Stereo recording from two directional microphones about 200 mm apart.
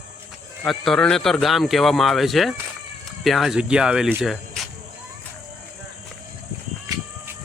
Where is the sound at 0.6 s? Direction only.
5° left (ahead or behind).